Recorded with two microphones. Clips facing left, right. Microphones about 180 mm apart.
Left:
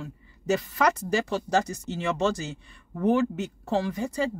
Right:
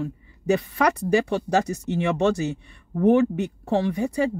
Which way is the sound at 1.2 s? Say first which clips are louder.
Right 3 dB; 60° right (ahead or behind).